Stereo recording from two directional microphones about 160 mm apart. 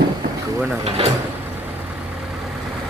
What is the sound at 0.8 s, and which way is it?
Speech, 40° right (ahead or behind).